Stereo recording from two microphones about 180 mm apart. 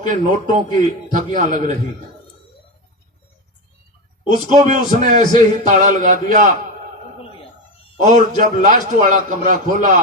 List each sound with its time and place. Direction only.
0.0 s a man's voice: 45° right (ahead or behind)
4.4 s a man's voice: 45° right (ahead or behind)
7.9 s a man's voice: 45° right (ahead or behind)